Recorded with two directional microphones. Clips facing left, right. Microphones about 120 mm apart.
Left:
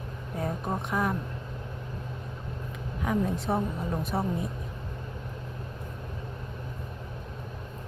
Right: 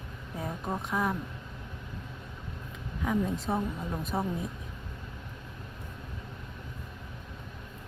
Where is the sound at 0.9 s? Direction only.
Centre (ahead or behind).